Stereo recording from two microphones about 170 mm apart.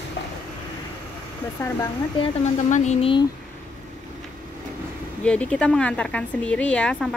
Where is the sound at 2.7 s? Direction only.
45° left (ahead or behind).